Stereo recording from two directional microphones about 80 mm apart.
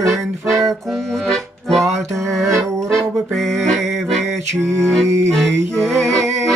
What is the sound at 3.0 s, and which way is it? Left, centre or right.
Music, centre.